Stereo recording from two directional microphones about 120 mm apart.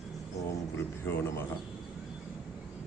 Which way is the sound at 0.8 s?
20° left (ahead or behind).